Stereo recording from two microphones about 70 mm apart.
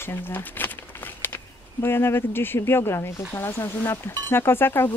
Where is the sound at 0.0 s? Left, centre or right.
Left.